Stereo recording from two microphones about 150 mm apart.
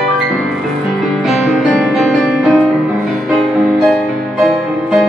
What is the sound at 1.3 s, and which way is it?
Music, centre (ahead or behind).